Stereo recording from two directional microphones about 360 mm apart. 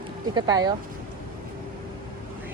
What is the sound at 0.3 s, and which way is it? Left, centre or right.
Speech, centre.